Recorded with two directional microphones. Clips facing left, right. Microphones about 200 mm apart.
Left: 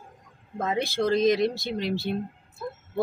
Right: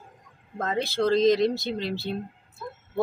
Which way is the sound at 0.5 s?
10° left (ahead or behind).